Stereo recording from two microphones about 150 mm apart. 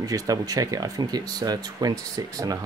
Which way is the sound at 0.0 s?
25° right (ahead or behind).